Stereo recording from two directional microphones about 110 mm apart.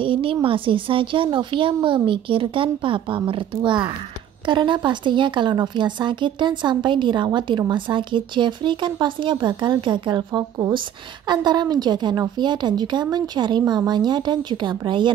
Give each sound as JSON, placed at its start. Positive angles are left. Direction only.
{"t": 0.0, "sound": "a woman's voice", "side_deg": -55}